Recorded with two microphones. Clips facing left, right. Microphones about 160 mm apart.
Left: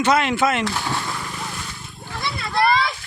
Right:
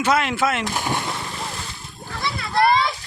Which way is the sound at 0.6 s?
15° right (ahead or behind).